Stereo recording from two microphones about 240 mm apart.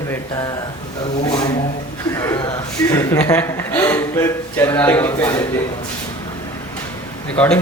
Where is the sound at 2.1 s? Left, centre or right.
Centre.